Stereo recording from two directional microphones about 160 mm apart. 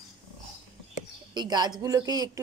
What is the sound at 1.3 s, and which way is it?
Speech, 25° right (ahead or behind).